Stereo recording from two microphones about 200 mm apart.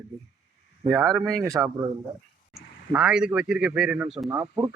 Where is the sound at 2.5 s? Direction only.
5° right (ahead or behind).